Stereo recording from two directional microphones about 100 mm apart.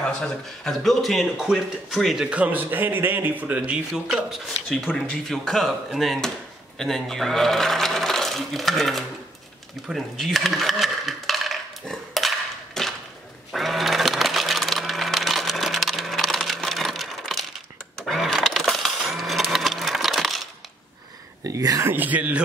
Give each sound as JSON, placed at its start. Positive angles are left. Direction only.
{"t": 0.0, "sound": "speech", "side_deg": 5}
{"t": 2.2, "sound": "speech", "side_deg": -15}
{"t": 9.8, "sound": "coin", "side_deg": 0}
{"t": 13.5, "sound": "sewing machine", "side_deg": 0}
{"t": 17.9, "sound": "vehicle", "side_deg": 0}
{"t": 21.5, "sound": "a sound", "side_deg": -35}
{"t": 21.8, "sound": "speech", "side_deg": -20}